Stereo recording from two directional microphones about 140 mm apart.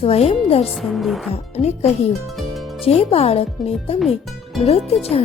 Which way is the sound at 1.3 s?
50° left (ahead or behind).